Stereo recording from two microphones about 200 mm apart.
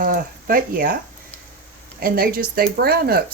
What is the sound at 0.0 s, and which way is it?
Speech, 45° right (ahead or behind).